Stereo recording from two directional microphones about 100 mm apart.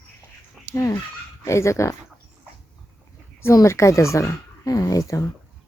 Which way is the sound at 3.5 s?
30° left (ahead or behind).